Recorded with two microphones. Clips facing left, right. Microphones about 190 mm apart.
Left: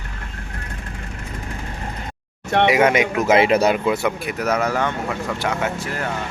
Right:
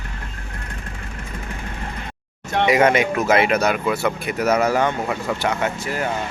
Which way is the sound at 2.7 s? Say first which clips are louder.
Right 2 dB; 5° left (ahead or behind).